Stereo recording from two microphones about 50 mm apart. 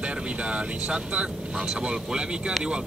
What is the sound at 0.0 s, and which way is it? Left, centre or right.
Speech, right.